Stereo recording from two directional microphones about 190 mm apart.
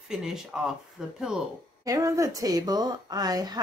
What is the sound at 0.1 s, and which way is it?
Speech, 5° right (ahead or behind).